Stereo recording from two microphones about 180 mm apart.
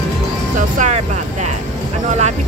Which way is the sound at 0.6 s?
40° right (ahead or behind).